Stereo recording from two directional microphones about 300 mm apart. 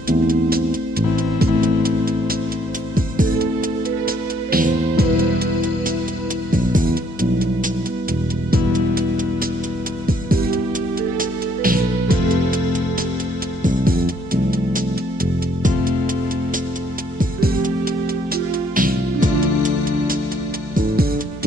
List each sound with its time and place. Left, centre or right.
0.1 s music: right
6.5 s music: right
8.5 s music: right
10.0 s music: right
17.2 s music: right
18.8 s music: right